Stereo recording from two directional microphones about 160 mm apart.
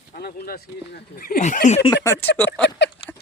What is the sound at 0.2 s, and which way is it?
Speech, 80° left.